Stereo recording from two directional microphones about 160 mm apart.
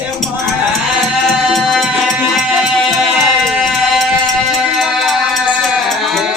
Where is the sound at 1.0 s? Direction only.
Centre (ahead or behind).